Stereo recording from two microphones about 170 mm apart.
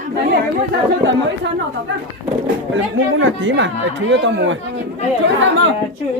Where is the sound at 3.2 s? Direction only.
90° right.